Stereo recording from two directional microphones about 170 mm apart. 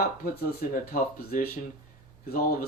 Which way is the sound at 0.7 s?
55° left (ahead or behind).